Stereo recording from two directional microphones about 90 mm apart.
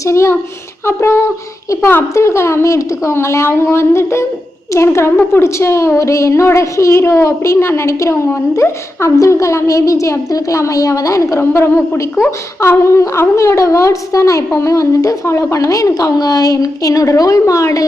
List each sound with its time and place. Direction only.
0.0 s a woman's voice: 30° left (ahead or behind)
0.9 s a sound: 25° left (ahead or behind)
2.1 s a woman's voice: 30° left (ahead or behind)